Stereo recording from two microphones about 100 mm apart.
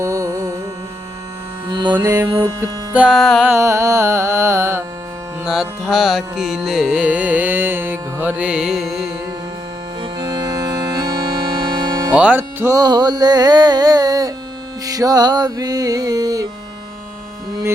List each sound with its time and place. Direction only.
0.0 s music: 30° right (ahead or behind)
1.9 s music: 25° right (ahead or behind)
2.9 s music: 10° right (ahead or behind)
3.2 s music: centre (ahead or behind)
3.4 s music: 25° right (ahead or behind)
5.5 s carnatic music: 5° right (ahead or behind)
10.0 s accordion: 50° right (ahead or behind)
11.0 s music: 50° right (ahead or behind)
12.1 s carnatic music: 10° right (ahead or behind)
12.4 s music: 20° right (ahead or behind)
12.7 s music: 45° right (ahead or behind)